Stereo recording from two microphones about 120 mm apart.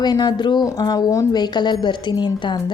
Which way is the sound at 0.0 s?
35° left (ahead or behind).